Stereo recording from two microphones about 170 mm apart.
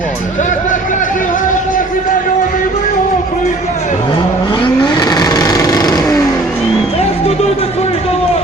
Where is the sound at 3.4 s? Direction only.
45° left (ahead or behind).